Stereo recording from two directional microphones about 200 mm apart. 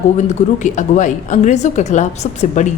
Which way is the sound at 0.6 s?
40° left (ahead or behind).